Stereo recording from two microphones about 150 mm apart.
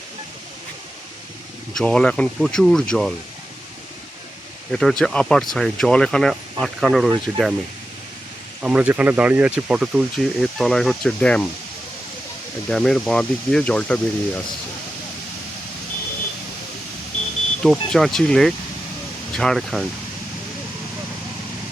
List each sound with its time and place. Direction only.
1.7 s speech: 5° left (ahead or behind)
4.7 s speech: 5° left (ahead or behind)
8.6 s speech: 10° right (ahead or behind); by 11.4 s 10° left (ahead or behind)
12.6 s speech: 5° left (ahead or behind)
17.6 s speech: 5° left (ahead or behind)